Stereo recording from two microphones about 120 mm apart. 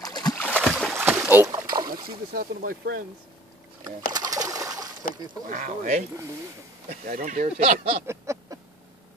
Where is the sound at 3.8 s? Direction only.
35° right (ahead or behind).